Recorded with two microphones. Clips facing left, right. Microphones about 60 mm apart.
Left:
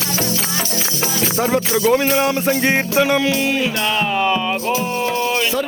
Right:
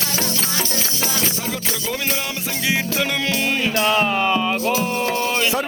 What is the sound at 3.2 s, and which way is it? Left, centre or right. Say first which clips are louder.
Music: left 3 dB; centre.